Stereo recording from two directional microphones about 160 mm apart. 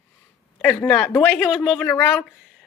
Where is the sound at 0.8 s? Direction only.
5° left (ahead or behind).